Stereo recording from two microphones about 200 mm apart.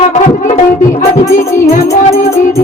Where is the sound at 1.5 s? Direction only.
15° left (ahead or behind).